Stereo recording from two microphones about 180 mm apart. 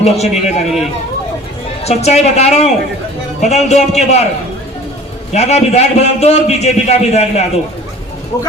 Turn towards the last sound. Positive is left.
turn(degrees=35)  # may be behind; listen again after turning